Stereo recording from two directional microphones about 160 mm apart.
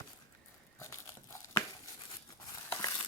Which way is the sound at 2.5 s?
25° left (ahead or behind).